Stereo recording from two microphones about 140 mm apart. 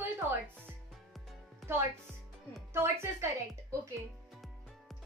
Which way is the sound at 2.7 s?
20° right (ahead or behind).